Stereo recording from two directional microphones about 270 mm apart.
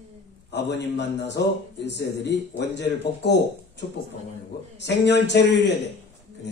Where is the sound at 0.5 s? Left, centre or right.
Left.